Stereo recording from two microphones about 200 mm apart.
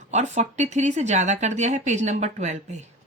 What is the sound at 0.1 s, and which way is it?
Speech, 35° right (ahead or behind).